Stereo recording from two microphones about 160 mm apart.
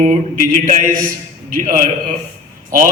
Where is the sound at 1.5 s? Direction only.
55° right (ahead or behind).